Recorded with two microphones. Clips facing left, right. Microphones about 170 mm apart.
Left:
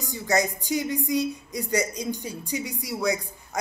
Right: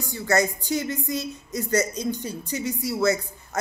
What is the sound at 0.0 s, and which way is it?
Speech, 15° left (ahead or behind).